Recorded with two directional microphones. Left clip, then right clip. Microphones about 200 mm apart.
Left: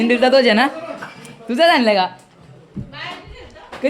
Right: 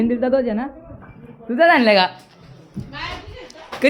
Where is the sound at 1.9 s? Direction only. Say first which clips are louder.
Right 1 dB; 10° right (ahead or behind).